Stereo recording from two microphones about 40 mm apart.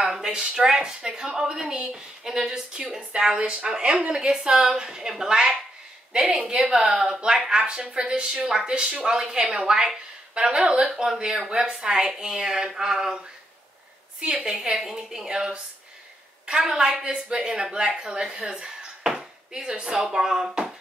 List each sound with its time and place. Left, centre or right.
0.3 s a woman's voice: right
14.2 s a woman's voice: right